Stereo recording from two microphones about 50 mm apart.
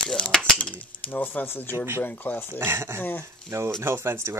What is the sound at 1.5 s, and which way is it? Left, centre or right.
Speech, left.